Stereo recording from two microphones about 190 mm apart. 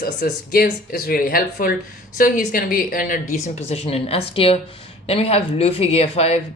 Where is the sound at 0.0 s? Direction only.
50° left (ahead or behind).